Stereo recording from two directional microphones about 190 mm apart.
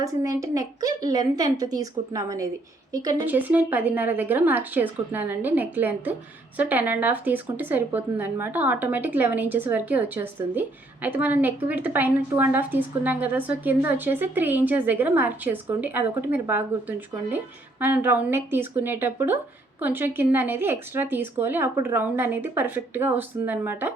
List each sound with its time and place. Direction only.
0.0 s a woman's voice: 15° right (ahead or behind)